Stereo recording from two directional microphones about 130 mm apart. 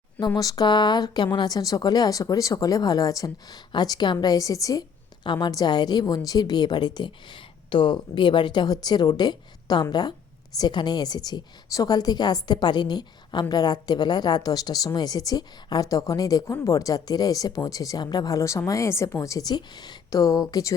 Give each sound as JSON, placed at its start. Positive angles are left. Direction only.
{"t": 0.3, "sound": "a woman's voice", "side_deg": 30}